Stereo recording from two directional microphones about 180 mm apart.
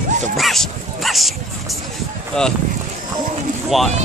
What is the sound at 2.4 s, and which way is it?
Speech, 5° left (ahead or behind).